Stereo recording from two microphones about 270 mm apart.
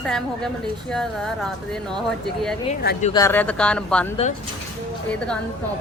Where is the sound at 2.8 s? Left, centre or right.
Left.